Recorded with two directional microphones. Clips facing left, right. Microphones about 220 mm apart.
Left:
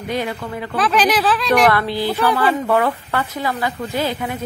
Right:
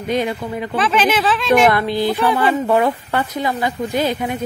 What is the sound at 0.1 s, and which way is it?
Speech, 20° right (ahead or behind).